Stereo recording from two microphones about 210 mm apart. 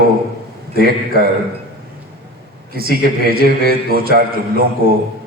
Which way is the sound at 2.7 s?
45° right (ahead or behind).